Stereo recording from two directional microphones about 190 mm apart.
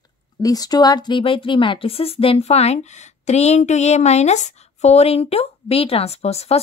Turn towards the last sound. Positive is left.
turn(degrees=35)  # may be behind; listen again after turning